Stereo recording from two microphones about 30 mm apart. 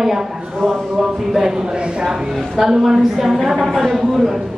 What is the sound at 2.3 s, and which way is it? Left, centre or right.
A woman's voice, centre.